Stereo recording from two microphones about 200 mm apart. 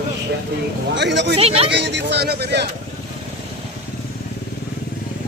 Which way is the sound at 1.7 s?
60° right (ahead or behind).